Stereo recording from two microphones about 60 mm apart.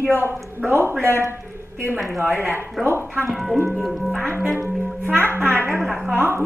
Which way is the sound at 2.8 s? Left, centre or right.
Centre.